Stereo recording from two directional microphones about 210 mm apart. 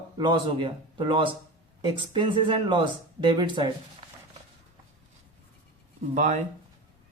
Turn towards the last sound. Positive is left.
turn(degrees=-35)  # may be behind; listen again after turning